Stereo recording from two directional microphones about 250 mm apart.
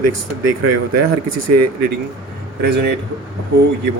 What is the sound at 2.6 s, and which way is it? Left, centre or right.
Speech, right.